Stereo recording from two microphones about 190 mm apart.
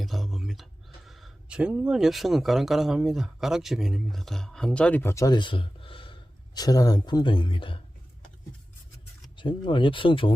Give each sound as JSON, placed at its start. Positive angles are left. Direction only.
{"t": 0.0, "sound": "speech", "side_deg": 0}
{"t": 9.3, "sound": "speech", "side_deg": 25}